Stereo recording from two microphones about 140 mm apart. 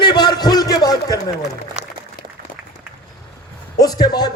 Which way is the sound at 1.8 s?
55° right (ahead or behind).